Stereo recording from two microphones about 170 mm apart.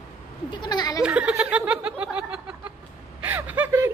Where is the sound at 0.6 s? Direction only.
25° left (ahead or behind).